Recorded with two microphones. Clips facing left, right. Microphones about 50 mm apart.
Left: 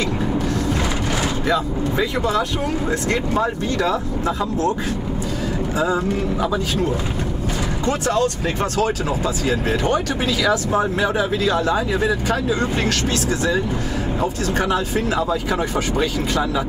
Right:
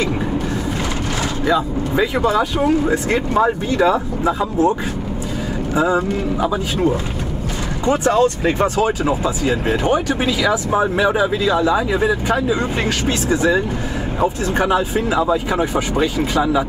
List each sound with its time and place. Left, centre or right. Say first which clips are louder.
1.5 s speech: right 4 dB; right
5.8 s speech: right 4 dB; centre
7.8 s speech: right 5 dB; centre